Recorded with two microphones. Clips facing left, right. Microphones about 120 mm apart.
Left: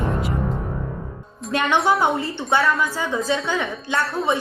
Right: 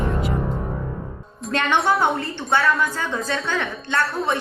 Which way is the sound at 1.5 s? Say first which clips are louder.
Left 1 dB; 10° left (ahead or behind).